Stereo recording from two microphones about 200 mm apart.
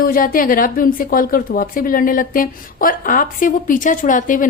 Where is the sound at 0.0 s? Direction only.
45° left (ahead or behind).